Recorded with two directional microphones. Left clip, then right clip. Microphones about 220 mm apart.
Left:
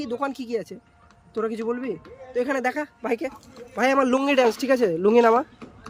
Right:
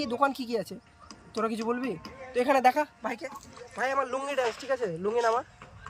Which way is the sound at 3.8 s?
50° left (ahead or behind).